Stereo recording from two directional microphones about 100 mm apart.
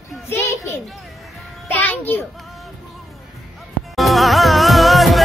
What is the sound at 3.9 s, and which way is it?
Music, centre (ahead or behind).